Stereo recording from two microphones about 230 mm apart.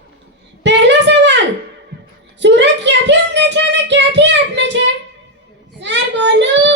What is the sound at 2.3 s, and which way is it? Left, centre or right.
Child singing, right.